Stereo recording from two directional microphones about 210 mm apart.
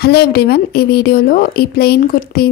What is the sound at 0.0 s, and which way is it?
A woman's voice, 50° left (ahead or behind).